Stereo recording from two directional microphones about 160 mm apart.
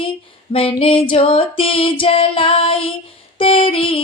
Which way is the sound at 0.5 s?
35° left (ahead or behind).